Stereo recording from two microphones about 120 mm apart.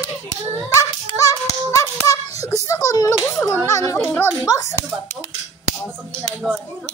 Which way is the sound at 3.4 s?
25° left (ahead or behind).